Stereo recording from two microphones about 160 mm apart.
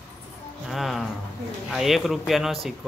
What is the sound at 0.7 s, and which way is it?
Speech, centre (ahead or behind).